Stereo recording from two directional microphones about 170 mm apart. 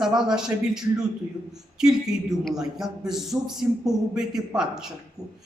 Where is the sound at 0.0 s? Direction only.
5° right (ahead or behind).